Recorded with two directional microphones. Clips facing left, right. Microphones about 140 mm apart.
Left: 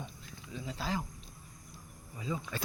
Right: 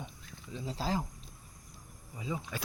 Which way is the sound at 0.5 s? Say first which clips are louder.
Right 2 dB; 30° right (ahead or behind).